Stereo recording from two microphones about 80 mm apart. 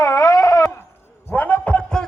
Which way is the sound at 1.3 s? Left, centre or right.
Centre.